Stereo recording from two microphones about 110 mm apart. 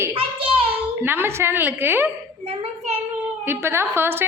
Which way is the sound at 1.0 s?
20° right (ahead or behind).